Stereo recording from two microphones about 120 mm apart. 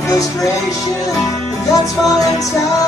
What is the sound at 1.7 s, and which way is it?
Music, 30° left (ahead or behind).